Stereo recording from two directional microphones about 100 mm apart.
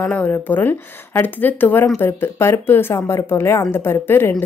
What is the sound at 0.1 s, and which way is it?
A woman's voice, 15° left (ahead or behind).